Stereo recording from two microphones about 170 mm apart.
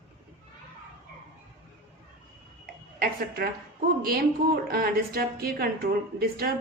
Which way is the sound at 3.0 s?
60° right (ahead or behind).